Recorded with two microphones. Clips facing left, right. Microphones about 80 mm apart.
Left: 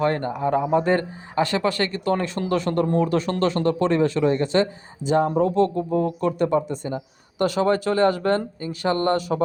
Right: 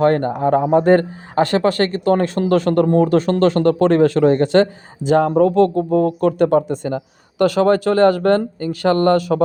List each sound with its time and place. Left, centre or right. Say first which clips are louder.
0.0 s speech: right 7 dB; right
5.4 s speech: right 6 dB; right